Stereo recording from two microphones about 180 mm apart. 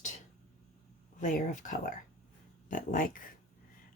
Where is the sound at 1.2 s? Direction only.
45° left (ahead or behind).